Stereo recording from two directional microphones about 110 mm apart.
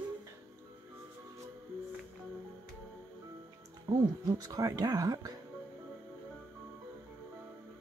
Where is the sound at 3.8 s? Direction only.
35° right (ahead or behind).